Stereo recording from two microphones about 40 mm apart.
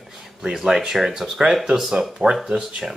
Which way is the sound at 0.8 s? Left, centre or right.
Centre.